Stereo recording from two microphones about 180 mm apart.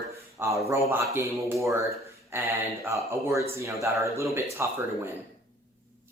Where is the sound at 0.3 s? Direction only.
15° right (ahead or behind).